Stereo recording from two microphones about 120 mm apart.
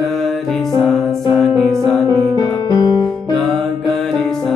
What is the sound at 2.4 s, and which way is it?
Music, 35° left (ahead or behind).